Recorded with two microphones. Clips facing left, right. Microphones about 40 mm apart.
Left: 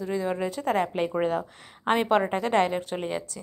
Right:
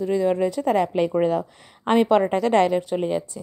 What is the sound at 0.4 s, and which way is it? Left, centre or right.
Speech, left.